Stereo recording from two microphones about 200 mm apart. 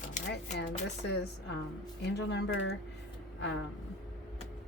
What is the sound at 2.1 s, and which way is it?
Speech, 60° left (ahead or behind).